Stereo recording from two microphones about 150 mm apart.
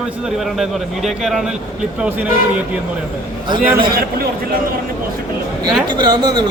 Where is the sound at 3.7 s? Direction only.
85° right.